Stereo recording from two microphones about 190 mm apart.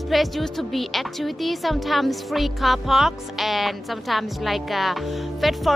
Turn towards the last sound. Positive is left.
turn(degrees=0)  # may be behind; listen again after turning